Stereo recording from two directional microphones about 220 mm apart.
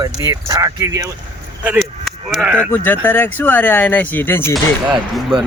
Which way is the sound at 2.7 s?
10° left (ahead or behind).